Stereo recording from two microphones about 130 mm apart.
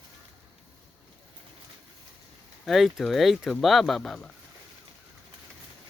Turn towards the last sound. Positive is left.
turn(degrees=0)  # may be behind; listen again after turning